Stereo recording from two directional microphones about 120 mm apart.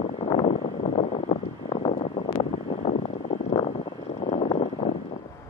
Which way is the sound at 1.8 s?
45° left (ahead or behind).